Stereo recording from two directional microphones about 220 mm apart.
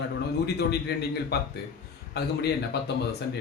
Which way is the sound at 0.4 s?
50° left (ahead or behind).